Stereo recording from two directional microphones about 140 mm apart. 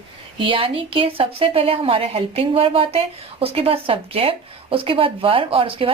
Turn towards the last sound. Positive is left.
turn(degrees=-40)  # may be behind; listen again after turning